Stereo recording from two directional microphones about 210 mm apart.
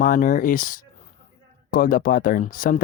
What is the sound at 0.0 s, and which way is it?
Speech, 40° left (ahead or behind).